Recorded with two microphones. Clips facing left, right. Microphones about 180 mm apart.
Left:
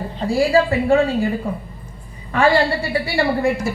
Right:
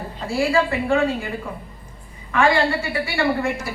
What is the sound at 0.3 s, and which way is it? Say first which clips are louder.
Speech: left 4 dB; 35° left (ahead or behind).